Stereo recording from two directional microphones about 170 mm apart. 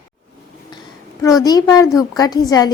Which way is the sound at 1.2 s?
20° left (ahead or behind).